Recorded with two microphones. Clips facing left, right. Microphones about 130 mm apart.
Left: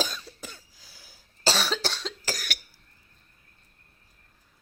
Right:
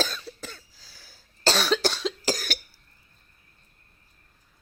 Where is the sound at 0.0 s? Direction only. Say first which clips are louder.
Right 2 dB; 15° left (ahead or behind).